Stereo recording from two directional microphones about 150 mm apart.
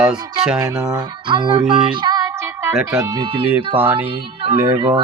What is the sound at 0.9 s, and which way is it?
Speech, 30° right (ahead or behind).